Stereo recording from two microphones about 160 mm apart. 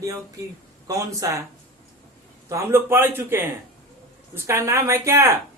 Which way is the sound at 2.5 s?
15° right (ahead or behind).